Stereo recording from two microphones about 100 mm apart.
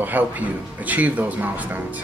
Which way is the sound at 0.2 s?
15° right (ahead or behind).